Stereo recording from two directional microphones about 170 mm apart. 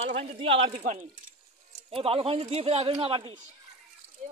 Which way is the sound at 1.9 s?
35° right (ahead or behind).